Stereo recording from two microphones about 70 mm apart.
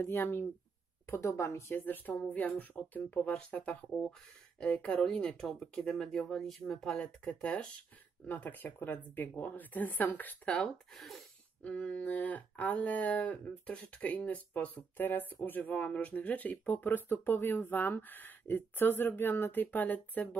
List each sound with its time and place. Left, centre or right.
0.0 s speech: left
1.2 s speech: left
2.3 s speech: left; by 7.1 s centre
7.2 s speech: centre
11.6 s speech: centre